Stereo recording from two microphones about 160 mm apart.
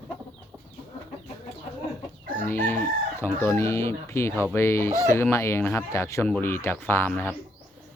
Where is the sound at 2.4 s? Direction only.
15° left (ahead or behind).